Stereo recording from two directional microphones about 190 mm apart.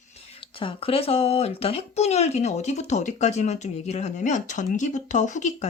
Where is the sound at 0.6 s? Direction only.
30° left (ahead or behind).